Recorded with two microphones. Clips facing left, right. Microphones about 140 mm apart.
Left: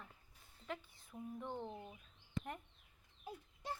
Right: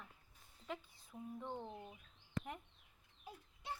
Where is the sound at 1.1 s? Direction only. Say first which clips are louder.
Left 1 dB; centre (ahead or behind).